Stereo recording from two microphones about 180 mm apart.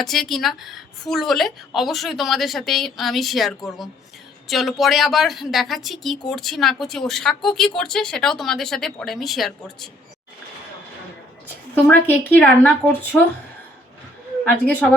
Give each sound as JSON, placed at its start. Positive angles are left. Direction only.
{"t": 0.0, "sound": "a woman's voice", "side_deg": 0}
{"t": 11.7, "sound": "a woman's voice", "side_deg": 10}
{"t": 14.4, "sound": "a woman's voice", "side_deg": 10}